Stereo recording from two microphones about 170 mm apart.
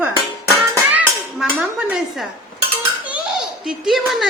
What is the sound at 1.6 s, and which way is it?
Speech, 5° right (ahead or behind).